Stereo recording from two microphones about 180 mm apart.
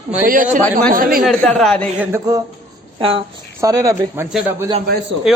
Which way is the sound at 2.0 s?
15° right (ahead or behind).